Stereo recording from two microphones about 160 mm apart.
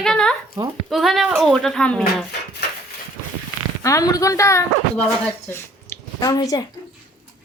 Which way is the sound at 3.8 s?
20° left (ahead or behind).